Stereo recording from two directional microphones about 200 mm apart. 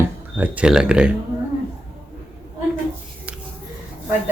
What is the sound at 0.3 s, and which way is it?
Speech, 5° right (ahead or behind).